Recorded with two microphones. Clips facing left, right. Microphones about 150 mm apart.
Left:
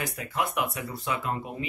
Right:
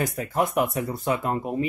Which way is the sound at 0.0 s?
45° right (ahead or behind).